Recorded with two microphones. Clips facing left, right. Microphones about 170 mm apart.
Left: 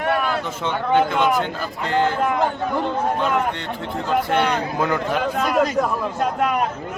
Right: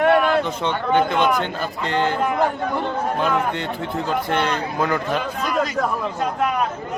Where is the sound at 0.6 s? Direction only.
5° left (ahead or behind).